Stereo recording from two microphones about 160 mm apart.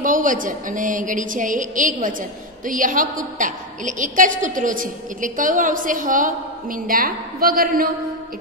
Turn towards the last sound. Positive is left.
turn(degrees=-65)  # may be behind; listen again after turning